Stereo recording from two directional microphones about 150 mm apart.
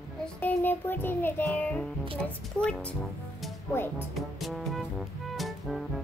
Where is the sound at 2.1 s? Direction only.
5° left (ahead or behind).